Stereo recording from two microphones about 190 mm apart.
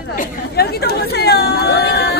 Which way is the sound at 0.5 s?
55° left (ahead or behind).